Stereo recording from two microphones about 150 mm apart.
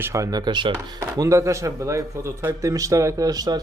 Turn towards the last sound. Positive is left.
turn(degrees=-25)  # may be behind; listen again after turning